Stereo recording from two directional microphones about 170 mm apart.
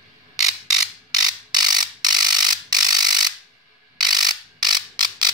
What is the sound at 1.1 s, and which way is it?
Ratchet, 25° right (ahead or behind).